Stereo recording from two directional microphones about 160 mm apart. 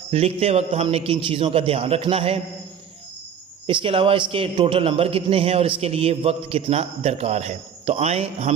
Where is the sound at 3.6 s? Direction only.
35° right (ahead or behind).